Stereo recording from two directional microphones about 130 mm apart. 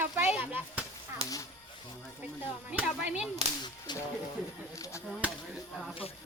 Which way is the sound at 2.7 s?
10° right (ahead or behind).